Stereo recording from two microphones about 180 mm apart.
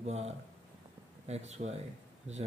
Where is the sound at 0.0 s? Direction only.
35° right (ahead or behind).